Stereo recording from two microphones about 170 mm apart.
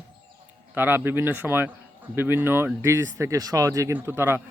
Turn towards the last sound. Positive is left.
turn(degrees=-15)  # may be behind; listen again after turning